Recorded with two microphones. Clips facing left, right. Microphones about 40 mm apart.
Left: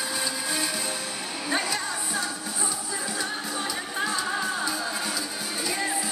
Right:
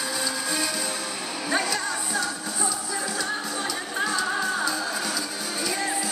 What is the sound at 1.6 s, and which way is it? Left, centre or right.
Music, centre.